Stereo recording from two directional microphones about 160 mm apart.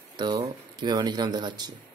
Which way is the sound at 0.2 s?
30° right (ahead or behind).